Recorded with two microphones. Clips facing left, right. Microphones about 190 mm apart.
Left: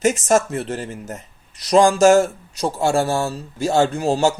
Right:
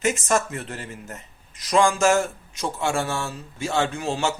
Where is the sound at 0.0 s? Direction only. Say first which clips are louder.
Left 6 dB; 40° left (ahead or behind).